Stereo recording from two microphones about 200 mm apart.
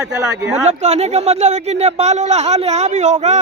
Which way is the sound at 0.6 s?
35° right (ahead or behind).